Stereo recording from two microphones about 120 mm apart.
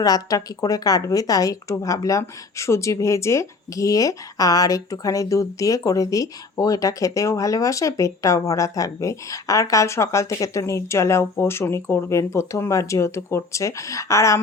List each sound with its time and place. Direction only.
0.0 s speech: 30° left (ahead or behind)